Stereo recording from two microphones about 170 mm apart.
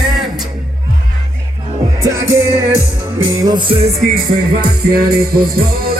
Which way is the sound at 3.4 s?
25° right (ahead or behind).